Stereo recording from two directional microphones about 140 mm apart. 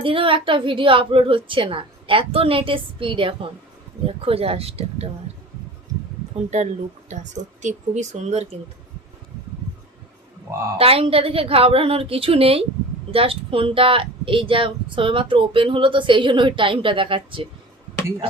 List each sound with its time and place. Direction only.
0.0 s a woman's voice: 40° right (ahead or behind)
6.5 s speech: 55° right (ahead or behind)
10.8 s a woman's voice: 45° right (ahead or behind)